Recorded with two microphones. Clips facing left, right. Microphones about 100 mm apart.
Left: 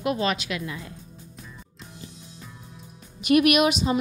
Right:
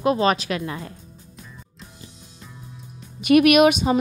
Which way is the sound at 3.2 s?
55° right (ahead or behind).